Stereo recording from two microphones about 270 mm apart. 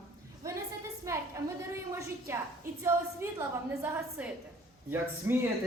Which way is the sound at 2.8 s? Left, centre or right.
Centre.